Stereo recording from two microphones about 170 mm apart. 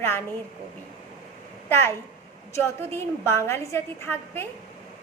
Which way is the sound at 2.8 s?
15° left (ahead or behind).